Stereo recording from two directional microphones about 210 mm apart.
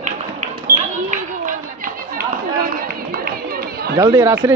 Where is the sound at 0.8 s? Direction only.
35° right (ahead or behind).